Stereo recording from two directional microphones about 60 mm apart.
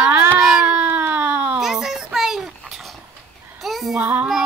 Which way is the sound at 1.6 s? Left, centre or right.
Centre.